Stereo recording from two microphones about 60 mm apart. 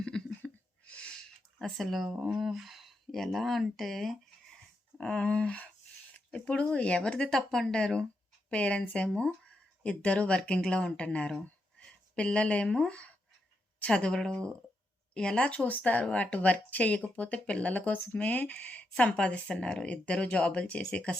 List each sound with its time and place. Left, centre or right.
0.0 s a sound: centre
1.6 s speech: centre
2.0 s speech: centre
4.9 s speech: centre